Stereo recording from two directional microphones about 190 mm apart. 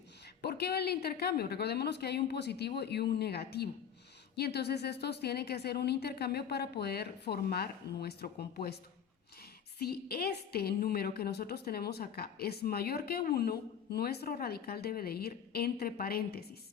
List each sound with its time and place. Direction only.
0.4 s a woman's voice: 55° left (ahead or behind)
9.7 s a woman's voice: 55° left (ahead or behind)